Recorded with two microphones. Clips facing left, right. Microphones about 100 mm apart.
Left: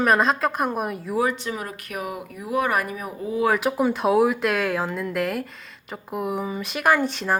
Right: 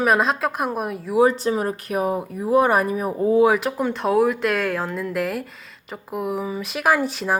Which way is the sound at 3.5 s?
5° left (ahead or behind).